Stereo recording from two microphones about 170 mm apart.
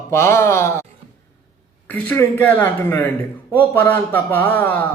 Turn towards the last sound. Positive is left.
turn(degrees=10)  # may be behind; listen again after turning